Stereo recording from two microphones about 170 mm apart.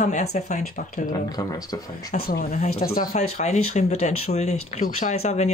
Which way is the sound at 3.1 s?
40° left (ahead or behind).